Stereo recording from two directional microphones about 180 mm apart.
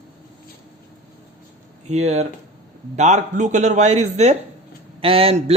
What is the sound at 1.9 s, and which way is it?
A man's voice, 35° right (ahead or behind).